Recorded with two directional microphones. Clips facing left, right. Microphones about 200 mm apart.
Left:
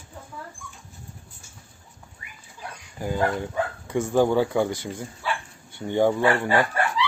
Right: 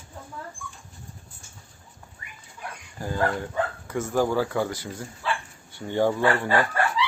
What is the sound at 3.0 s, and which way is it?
Speech, 15° left (ahead or behind).